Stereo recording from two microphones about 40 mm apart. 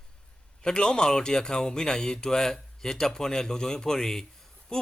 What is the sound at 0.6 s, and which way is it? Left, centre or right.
Speech, centre.